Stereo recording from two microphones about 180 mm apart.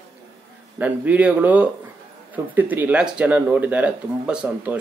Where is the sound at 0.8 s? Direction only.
10° right (ahead or behind).